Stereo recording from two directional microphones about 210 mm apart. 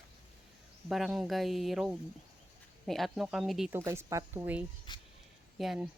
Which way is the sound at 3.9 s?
15° right (ahead or behind).